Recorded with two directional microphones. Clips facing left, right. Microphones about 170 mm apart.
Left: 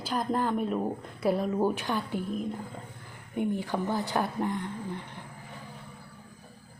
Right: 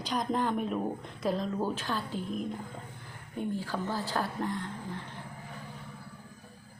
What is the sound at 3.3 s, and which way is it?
A woman's voice, 15° left (ahead or behind).